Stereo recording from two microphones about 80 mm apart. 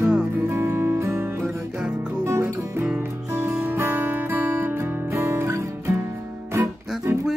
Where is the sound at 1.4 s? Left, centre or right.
Centre.